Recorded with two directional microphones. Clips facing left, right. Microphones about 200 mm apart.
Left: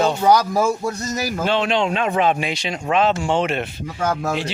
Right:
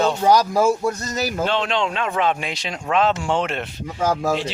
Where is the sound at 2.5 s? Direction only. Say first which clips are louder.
Left 2 dB; centre (ahead or behind).